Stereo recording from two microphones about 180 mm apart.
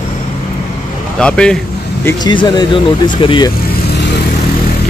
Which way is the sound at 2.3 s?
25° left (ahead or behind).